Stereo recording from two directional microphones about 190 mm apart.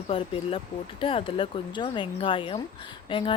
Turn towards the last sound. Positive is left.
turn(degrees=25)  # may be behind; listen again after turning